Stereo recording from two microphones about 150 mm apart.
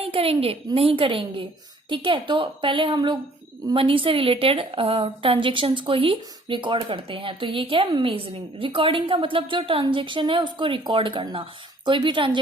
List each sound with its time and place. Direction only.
0.0 s a woman's voice: 40° right (ahead or behind)